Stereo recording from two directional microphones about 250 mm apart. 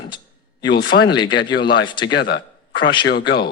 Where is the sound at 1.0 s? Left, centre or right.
Centre.